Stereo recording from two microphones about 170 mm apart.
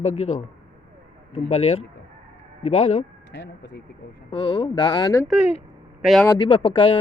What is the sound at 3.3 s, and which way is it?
Speech, 90° left.